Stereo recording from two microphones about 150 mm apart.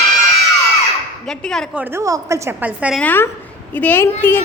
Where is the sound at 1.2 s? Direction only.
5° left (ahead or behind).